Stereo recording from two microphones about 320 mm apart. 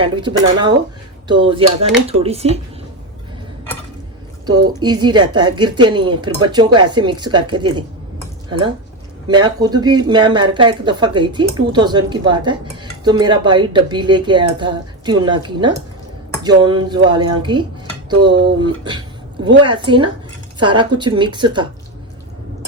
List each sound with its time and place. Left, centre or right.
0.0 s speech: centre
4.4 s speech: centre